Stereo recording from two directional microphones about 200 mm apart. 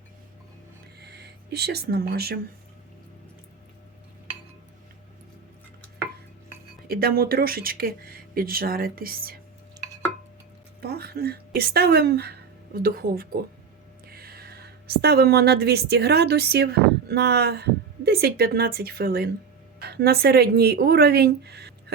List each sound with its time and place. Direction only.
0.9 s speech: 55° right (ahead or behind)
6.8 s speech: 50° right (ahead or behind)
10.8 s a woman's voice: 50° right (ahead or behind)